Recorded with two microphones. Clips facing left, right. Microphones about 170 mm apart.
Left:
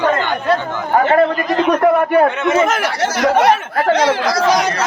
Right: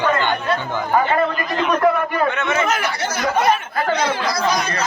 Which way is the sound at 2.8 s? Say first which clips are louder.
Left 6 dB; 90° left.